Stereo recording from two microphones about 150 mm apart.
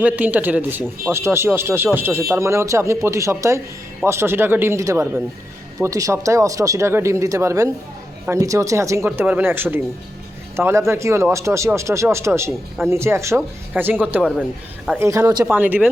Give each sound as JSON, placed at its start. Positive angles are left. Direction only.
{"t": 0.0, "sound": "speech", "side_deg": -10}
{"t": 15.4, "sound": "speech", "side_deg": -10}